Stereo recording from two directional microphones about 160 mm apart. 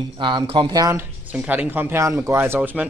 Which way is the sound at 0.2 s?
30° right (ahead or behind).